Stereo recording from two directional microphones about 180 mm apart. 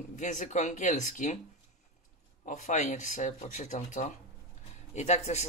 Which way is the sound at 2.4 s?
45° left (ahead or behind).